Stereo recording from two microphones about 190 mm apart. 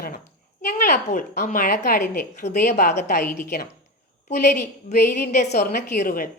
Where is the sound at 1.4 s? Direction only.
40° left (ahead or behind).